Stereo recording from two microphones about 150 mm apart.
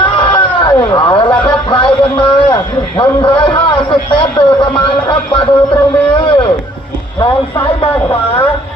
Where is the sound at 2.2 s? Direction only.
30° left (ahead or behind).